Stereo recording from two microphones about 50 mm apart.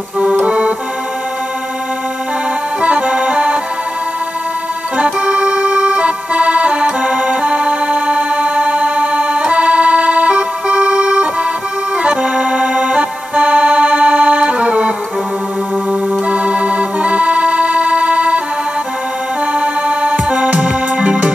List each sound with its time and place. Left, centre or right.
0.4 s music: right
2.8 s music: right
4.9 s organ: right
12.0 s music: right
15.9 s organ: right
19.6 s music: right